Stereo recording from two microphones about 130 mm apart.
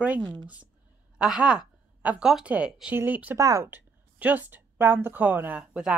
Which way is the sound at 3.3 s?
25° right (ahead or behind).